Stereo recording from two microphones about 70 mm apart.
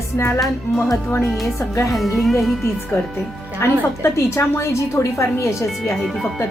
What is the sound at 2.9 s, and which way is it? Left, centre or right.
A woman's voice, left.